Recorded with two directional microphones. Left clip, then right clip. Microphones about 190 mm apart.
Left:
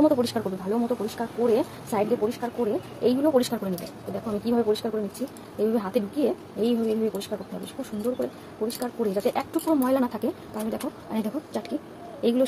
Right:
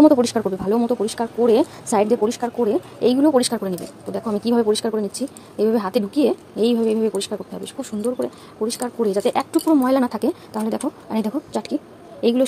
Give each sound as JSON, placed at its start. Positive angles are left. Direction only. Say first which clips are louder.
{"t": 0.0, "sound": "speech", "louder": "right 8 dB", "side_deg": -40}